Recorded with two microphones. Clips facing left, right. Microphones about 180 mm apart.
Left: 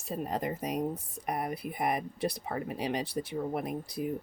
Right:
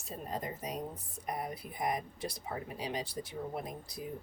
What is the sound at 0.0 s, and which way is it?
Speech, 70° left (ahead or behind).